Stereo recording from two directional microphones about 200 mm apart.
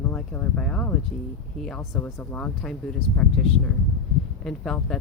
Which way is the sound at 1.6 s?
5° left (ahead or behind).